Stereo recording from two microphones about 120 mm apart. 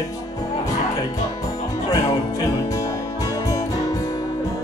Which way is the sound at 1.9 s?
30° left (ahead or behind).